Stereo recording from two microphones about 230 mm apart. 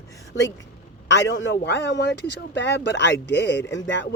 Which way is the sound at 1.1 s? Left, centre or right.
Left.